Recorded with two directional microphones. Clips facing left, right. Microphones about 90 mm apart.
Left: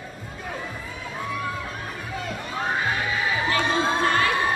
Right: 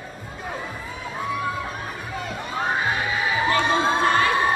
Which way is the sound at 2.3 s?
20° right (ahead or behind).